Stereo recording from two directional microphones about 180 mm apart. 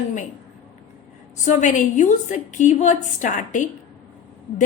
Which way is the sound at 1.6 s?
45° left (ahead or behind).